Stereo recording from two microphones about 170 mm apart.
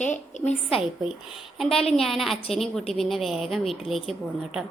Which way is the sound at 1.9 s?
Centre (ahead or behind).